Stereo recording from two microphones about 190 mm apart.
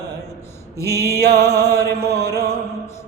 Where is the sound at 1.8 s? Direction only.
55° right (ahead or behind).